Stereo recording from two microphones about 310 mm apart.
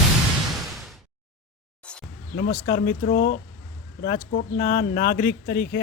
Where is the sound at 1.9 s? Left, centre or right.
Centre.